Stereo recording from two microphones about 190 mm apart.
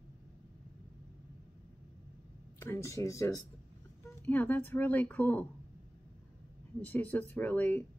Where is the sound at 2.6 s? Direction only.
15° left (ahead or behind).